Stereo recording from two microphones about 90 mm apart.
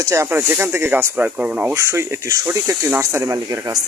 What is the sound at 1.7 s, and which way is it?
Speech, 35° right (ahead or behind).